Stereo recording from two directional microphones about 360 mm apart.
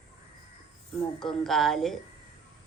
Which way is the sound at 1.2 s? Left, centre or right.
Centre.